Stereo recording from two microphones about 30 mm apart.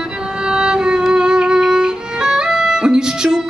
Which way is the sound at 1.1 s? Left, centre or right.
Right.